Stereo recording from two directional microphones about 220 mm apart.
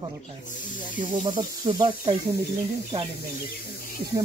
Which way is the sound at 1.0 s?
20° right (ahead or behind).